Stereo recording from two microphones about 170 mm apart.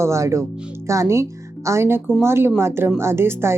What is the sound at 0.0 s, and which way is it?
A woman's voice, 15° right (ahead or behind).